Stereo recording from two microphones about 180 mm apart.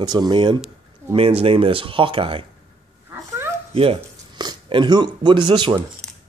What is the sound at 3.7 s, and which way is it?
Speech, 30° right (ahead or behind).